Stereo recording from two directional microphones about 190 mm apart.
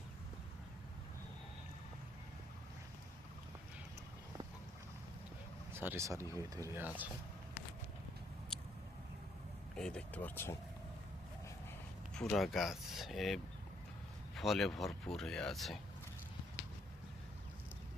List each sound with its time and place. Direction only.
5.7 s speech: 10° right (ahead or behind)
8.5 s a sound: 5° left (ahead or behind)
9.7 s speech: 5° left (ahead or behind)
12.1 s speech: centre (ahead or behind)